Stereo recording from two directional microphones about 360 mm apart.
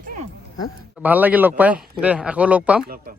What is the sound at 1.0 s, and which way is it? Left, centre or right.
Speech, centre.